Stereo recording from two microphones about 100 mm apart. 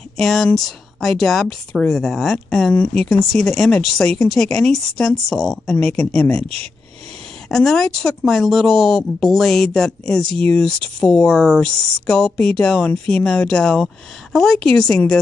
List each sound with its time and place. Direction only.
0.2 s speech: 5° left (ahead or behind)
2.7 s speech: 15° left (ahead or behind)
3.0 s speech: 5° left (ahead or behind)
7.4 s speech: 5° left (ahead or behind)